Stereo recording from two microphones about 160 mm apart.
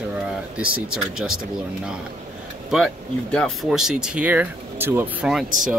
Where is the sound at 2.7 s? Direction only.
5° left (ahead or behind); by 5.2 s 15° right (ahead or behind).